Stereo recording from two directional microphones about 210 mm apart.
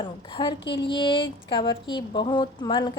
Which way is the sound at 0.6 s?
55° left (ahead or behind).